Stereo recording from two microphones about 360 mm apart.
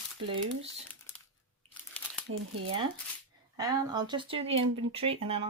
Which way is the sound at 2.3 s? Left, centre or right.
Right.